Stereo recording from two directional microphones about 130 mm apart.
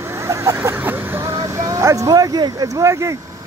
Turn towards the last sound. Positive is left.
turn(degrees=-25)  # may be behind; listen again after turning